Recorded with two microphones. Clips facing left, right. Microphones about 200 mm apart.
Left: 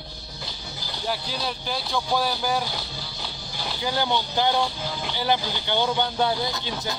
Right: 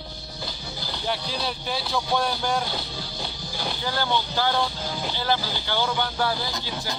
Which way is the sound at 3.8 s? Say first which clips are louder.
Left 2 dB; 15° left (ahead or behind).